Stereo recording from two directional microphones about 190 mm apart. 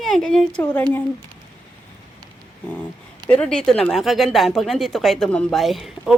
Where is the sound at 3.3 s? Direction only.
5° left (ahead or behind).